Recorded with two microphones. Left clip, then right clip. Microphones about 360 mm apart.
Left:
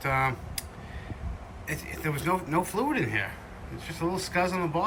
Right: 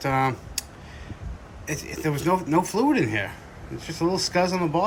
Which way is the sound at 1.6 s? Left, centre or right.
Centre.